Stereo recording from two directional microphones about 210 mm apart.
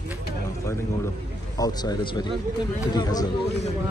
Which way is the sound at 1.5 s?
20° left (ahead or behind).